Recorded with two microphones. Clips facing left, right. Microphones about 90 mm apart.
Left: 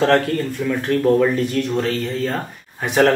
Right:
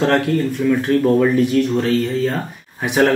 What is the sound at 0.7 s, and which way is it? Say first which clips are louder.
Speech: right 1 dB; 5° right (ahead or behind).